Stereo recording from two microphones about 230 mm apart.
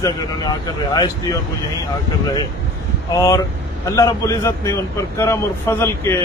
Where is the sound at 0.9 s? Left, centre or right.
Centre.